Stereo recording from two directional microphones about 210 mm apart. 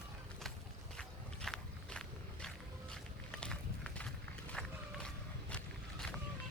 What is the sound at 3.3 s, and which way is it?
Run, 5° left (ahead or behind).